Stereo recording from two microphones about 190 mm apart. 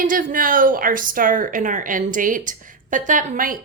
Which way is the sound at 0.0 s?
45° right (ahead or behind).